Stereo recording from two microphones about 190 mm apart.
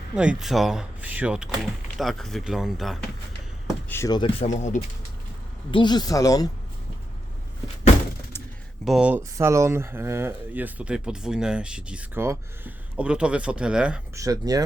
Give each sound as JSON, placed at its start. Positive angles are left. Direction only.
{"t": 0.2, "sound": "speech", "side_deg": -5}
{"t": 3.8, "sound": "speech", "side_deg": 15}
{"t": 4.4, "sound": "speech", "side_deg": 40}
{"t": 5.7, "sound": "speech", "side_deg": 25}
{"t": 8.8, "sound": "speech", "side_deg": -5}
{"t": 14.2, "sound": "speech", "side_deg": -20}